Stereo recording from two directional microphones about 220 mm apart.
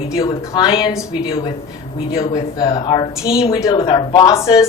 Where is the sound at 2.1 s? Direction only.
15° left (ahead or behind).